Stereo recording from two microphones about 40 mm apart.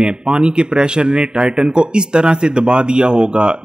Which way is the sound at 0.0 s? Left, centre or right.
Right.